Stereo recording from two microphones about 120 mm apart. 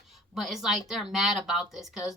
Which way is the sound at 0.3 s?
Centre (ahead or behind).